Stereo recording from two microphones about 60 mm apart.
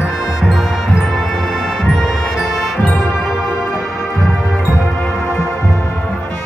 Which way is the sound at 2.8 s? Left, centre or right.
Left.